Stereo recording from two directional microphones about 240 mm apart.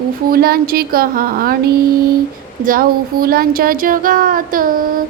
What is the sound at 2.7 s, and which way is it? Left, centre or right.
Speech, right.